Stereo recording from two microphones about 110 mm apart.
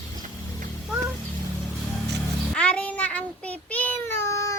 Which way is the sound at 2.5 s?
10° left (ahead or behind).